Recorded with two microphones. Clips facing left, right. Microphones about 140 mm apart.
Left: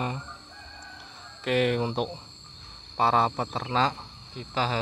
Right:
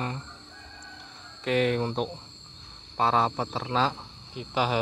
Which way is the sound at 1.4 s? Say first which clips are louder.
Even; centre (ahead or behind).